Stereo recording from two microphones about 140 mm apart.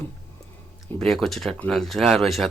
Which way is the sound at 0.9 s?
5° left (ahead or behind).